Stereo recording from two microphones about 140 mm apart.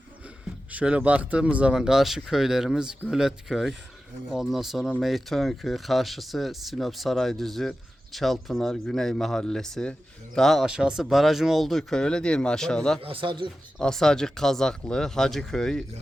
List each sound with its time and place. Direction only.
0.7 s speech: 10° right (ahead or behind)
13.0 s speech: 40° right (ahead or behind)
13.7 s speech: 5° left (ahead or behind)